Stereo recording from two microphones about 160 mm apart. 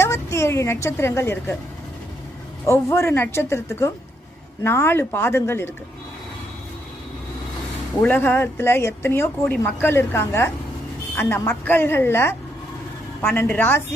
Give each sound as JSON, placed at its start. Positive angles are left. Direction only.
{"t": 0.0, "sound": "a woman's voice", "side_deg": 15}
{"t": 2.6, "sound": "speech", "side_deg": 15}
{"t": 8.0, "sound": "speech", "side_deg": 10}